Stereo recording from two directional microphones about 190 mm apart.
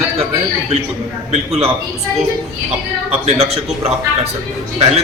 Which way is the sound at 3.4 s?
30° right (ahead or behind).